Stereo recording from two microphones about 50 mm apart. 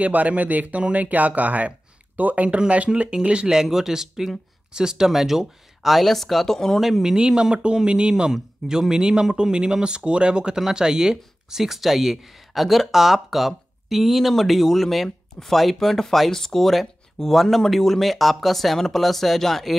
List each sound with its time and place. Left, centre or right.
0.0 s speech: right; by 6.8 s centre
6.8 s speech: centre